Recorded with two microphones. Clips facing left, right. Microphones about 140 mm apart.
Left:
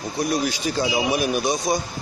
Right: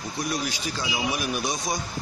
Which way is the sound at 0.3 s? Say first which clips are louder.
Left 7 dB; 40° left (ahead or behind).